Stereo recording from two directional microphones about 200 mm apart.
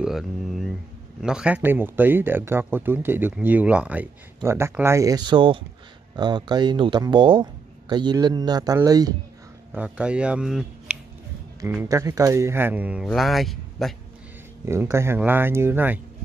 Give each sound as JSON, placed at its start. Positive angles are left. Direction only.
{"t": 0.0, "sound": "a man's voice", "side_deg": 0}
{"t": 9.8, "sound": "a man's voice", "side_deg": -5}
{"t": 11.7, "sound": "speech", "side_deg": -15}
{"t": 14.6, "sound": "speech", "side_deg": -15}